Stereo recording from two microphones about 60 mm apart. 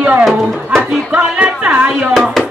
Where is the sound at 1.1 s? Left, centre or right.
Centre.